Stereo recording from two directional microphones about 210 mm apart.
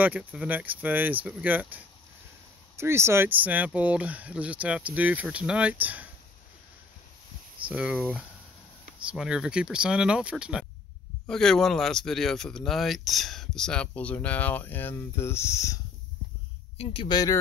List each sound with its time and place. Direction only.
0.0 s speech: 10° right (ahead or behind)
7.6 s speech: 5° right (ahead or behind); by 15.8 s 15° left (ahead or behind)
16.7 s speech: 25° left (ahead or behind)